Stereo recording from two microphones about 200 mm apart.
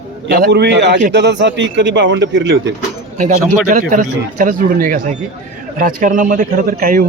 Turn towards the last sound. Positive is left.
turn(degrees=-45)  # may be behind; listen again after turning